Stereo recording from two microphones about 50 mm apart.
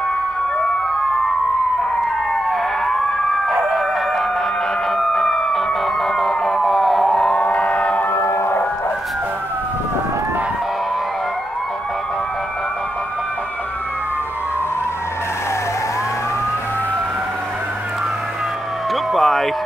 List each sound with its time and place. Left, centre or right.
4.9 s emergency vehicle: centre
7.3 s siren: left
8.1 s siren: left
19.1 s a sound: centre